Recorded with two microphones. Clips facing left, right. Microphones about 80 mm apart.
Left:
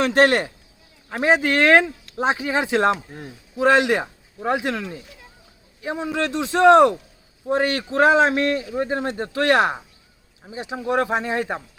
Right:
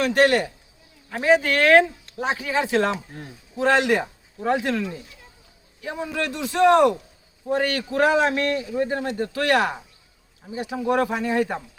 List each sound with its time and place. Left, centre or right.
0.0 s speech: left
1.2 s a man's voice: left